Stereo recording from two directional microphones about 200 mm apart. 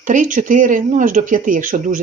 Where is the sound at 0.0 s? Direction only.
40° right (ahead or behind).